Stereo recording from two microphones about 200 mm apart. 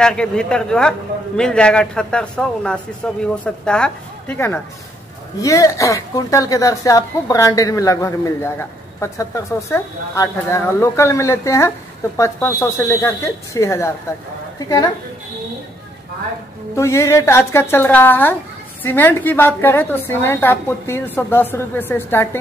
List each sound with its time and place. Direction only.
0.0 s a man's voice: 5° left (ahead or behind)
16.7 s a woman's voice: 15° left (ahead or behind)